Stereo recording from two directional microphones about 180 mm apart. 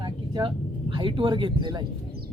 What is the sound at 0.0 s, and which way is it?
Speech, 25° right (ahead or behind).